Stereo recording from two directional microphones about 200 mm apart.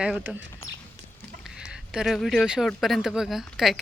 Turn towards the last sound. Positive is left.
turn(degrees=0)  # may be behind; listen again after turning